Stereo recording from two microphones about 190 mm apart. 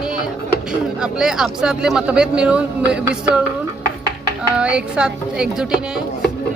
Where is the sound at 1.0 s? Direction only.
5° right (ahead or behind).